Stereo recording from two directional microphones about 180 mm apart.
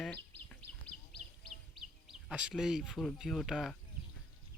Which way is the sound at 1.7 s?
Centre (ahead or behind).